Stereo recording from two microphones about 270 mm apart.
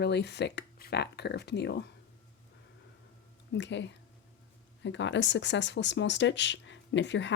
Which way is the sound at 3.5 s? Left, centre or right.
Left.